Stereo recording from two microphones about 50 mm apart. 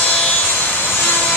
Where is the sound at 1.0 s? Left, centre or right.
Left.